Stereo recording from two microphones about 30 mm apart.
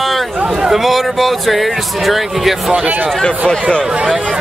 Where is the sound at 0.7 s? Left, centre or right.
Centre.